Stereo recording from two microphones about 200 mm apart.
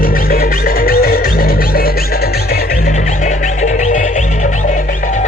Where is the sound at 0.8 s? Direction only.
50° left (ahead or behind).